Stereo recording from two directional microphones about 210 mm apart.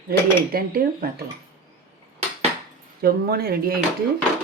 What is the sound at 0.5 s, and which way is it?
Speech, 45° right (ahead or behind).